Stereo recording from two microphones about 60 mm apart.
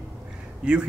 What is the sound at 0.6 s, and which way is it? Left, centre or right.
Speech, centre.